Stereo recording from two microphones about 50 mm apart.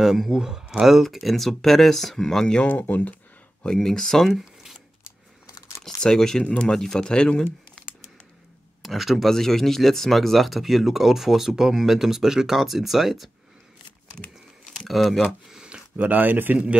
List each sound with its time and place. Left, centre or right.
0.0 s speech: centre
1.1 s speech: centre
2.6 s speech: left
3.6 s speech: centre
4.3 s a sound: centre
5.9 s speech: centre
6.4 s speech: left
6.7 s speech: centre
8.8 s speech: centre
14.9 s speech: centre
15.5 s a sound: centre
16.0 s speech: right